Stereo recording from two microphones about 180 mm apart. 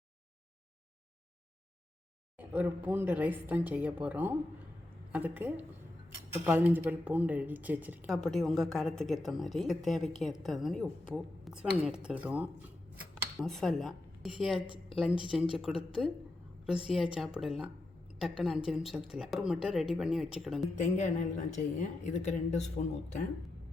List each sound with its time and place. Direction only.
2.4 s a woman's voice: 10° right (ahead or behind)
8.1 s a woman's voice: centre (ahead or behind)
20.7 s a woman's voice: 45° left (ahead or behind)